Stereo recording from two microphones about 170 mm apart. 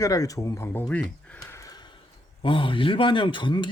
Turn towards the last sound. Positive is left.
turn(degrees=25)  # may be behind; listen again after turning